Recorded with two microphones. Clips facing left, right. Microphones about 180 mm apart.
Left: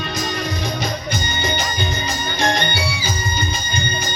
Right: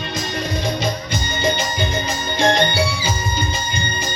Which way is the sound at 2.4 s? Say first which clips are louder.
Right 5 dB; 25° right (ahead or behind).